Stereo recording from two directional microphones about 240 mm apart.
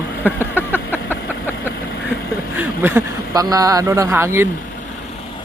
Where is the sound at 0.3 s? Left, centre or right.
Centre.